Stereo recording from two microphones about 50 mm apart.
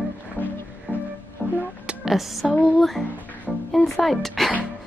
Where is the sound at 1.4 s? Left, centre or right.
Left.